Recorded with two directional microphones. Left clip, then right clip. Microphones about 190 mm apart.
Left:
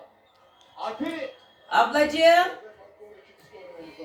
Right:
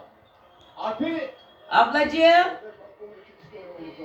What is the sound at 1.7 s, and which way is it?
Speech, 5° left (ahead or behind).